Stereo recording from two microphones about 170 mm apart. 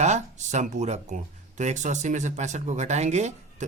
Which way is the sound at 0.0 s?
45° right (ahead or behind).